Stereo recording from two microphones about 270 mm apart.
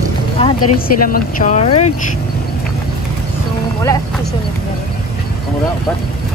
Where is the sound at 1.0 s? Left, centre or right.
Left.